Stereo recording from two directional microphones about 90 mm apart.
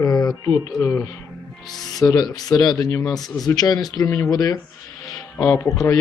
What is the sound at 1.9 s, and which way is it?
Speech, 45° left (ahead or behind).